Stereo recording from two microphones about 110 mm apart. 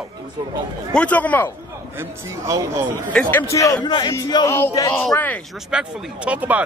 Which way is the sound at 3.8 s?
40° left (ahead or behind).